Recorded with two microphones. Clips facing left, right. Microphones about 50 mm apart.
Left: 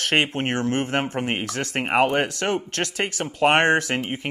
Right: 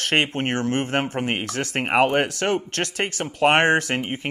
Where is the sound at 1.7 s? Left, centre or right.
Centre.